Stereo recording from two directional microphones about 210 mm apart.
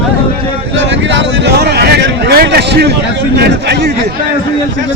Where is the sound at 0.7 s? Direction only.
60° right (ahead or behind).